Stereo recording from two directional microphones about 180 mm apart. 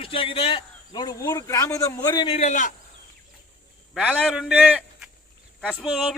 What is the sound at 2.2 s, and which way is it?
Speech, 35° left (ahead or behind).